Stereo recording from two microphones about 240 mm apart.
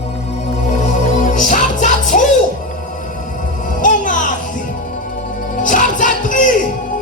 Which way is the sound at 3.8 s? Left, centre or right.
Left.